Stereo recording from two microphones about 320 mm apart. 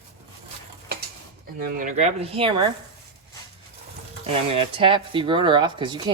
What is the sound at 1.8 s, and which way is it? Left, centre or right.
Speech, right.